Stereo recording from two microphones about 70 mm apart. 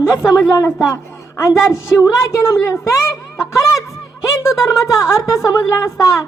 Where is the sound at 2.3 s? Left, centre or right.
Left.